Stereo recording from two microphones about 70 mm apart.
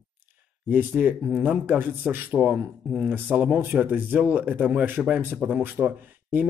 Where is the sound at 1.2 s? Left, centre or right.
Right.